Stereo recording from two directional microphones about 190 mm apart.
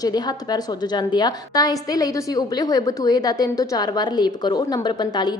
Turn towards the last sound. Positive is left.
turn(degrees=20)  # may be behind; listen again after turning